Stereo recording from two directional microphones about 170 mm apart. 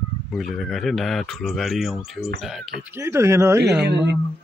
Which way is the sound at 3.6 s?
75° right (ahead or behind).